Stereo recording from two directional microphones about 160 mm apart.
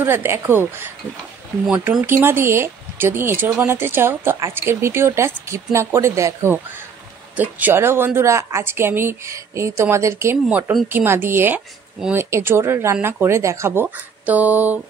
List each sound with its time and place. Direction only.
0.0 s speech: 15° right (ahead or behind)
2.0 s speech: 15° right (ahead or behind)
10.3 s speech: 5° right (ahead or behind)